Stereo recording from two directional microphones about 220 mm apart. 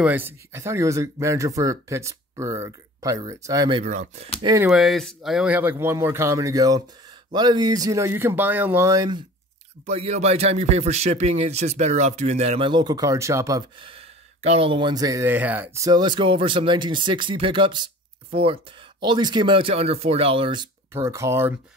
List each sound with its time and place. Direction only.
0.0 s speech: 10° right (ahead or behind)
3.8 s speech: 35° right (ahead or behind)
4.4 s speech: 15° right (ahead or behind)
4.6 s speech: centre (ahead or behind); by 9.2 s 15° right (ahead or behind)
9.8 s speech: 30° right (ahead or behind)
20.9 s speech: 15° right (ahead or behind)